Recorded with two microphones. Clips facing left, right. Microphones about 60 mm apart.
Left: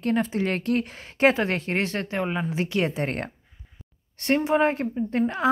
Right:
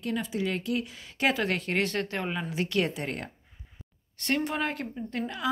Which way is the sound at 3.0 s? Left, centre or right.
Left.